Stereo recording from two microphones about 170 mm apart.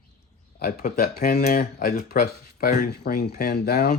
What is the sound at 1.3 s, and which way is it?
Speech, 50° left (ahead or behind).